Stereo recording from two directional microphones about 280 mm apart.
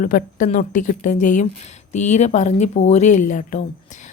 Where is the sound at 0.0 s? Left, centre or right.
Left.